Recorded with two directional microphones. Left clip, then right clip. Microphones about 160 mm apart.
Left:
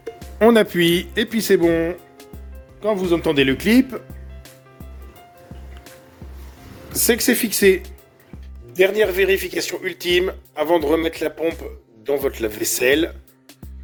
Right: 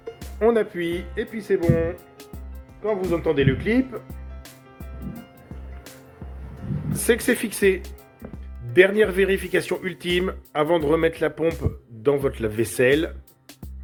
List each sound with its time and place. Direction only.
0.3 s speech: 90° left
7.0 s speech: 30° left (ahead or behind)